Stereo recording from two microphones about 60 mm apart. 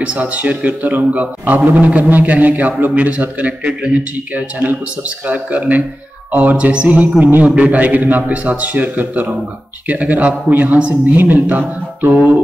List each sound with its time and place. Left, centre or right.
0.0 s a man's voice: right